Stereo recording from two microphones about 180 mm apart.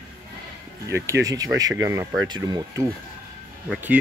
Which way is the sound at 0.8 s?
15° right (ahead or behind).